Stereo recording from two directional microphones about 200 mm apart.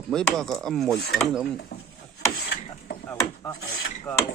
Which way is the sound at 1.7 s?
55° left (ahead or behind).